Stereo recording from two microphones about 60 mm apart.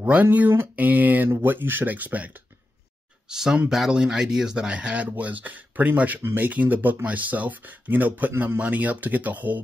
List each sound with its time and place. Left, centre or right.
0.0 s speech: right
3.3 s speech: centre; by 9.6 s right